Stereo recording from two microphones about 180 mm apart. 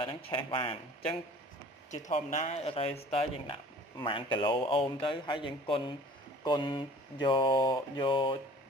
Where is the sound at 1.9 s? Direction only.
40° left (ahead or behind).